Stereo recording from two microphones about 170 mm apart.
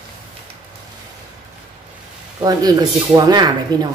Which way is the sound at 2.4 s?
20° right (ahead or behind).